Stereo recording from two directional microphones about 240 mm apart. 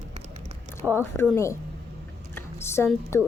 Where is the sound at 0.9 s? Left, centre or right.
Centre.